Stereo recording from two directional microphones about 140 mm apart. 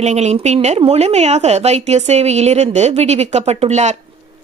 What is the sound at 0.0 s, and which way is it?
A woman's voice, 50° right (ahead or behind).